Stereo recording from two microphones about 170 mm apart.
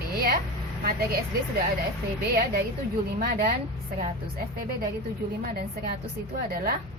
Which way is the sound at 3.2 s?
65° right (ahead or behind).